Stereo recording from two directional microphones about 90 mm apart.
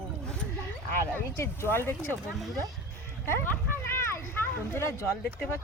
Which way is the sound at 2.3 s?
Centre (ahead or behind).